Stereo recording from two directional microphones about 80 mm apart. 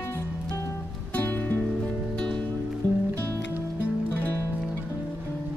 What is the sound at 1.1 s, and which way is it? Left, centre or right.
Music, left.